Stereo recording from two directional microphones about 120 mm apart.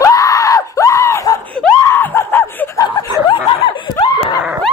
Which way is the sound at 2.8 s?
30° left (ahead or behind).